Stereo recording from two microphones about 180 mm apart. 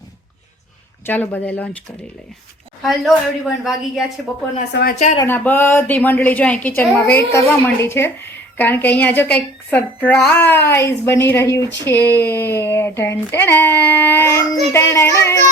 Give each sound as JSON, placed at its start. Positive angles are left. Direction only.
{"t": 1.0, "sound": "a woman's voice", "side_deg": 10}
{"t": 2.8, "sound": "a woman's voice", "side_deg": 0}
{"t": 4.7, "sound": "a woman's voice", "side_deg": 60}
{"t": 5.1, "sound": "a woman's voice", "side_deg": 15}